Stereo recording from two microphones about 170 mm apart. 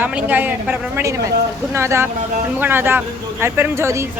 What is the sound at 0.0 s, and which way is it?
Speech, 10° right (ahead or behind).